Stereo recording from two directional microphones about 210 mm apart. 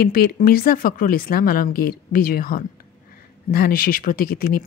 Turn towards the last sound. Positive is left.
turn(degrees=45)  # may be behind; listen again after turning